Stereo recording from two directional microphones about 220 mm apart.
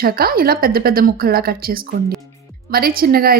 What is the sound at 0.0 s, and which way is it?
A woman's voice, 45° right (ahead or behind).